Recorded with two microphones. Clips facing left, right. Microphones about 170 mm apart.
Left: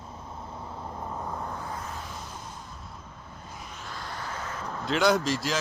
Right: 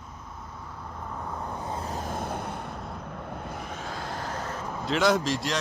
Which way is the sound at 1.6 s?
30° right (ahead or behind).